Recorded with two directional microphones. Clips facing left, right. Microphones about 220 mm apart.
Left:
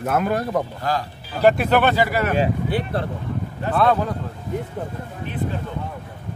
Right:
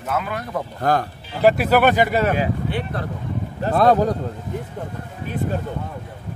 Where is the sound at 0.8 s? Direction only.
55° right (ahead or behind).